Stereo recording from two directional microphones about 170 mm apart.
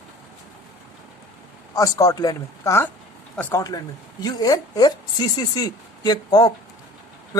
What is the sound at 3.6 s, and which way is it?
A woman's voice, 20° left (ahead or behind).